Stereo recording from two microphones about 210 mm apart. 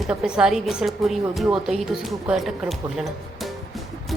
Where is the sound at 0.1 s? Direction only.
5° right (ahead or behind).